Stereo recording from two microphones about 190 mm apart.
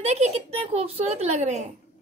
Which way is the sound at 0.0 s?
35° right (ahead or behind).